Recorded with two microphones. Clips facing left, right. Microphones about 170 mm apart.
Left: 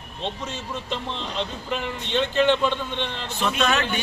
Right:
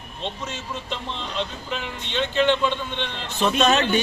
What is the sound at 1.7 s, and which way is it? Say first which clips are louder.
Speech: left 3 dB; 5° left (ahead or behind).